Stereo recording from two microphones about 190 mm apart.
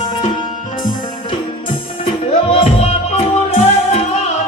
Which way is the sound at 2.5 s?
35° left (ahead or behind).